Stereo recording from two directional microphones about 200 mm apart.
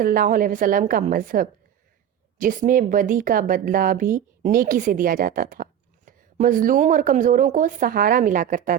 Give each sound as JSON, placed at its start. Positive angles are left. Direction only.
{"t": 0.0, "sound": "a woman's voice", "side_deg": -45}